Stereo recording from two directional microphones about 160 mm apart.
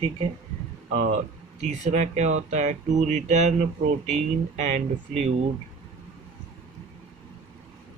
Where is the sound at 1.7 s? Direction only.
45° right (ahead or behind).